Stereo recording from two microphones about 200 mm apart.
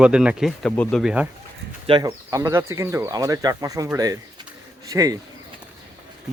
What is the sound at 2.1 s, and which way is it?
Speech, 15° right (ahead or behind).